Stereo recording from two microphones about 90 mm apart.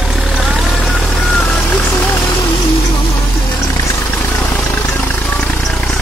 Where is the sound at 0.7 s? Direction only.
15° left (ahead or behind).